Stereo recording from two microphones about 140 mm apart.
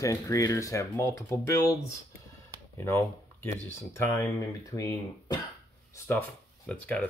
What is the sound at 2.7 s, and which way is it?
Speech, 15° left (ahead or behind).